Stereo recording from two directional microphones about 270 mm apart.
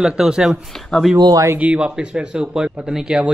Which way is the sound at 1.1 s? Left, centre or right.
Centre.